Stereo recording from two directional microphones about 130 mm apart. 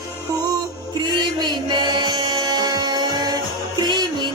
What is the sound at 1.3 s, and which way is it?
Music, 35° right (ahead or behind).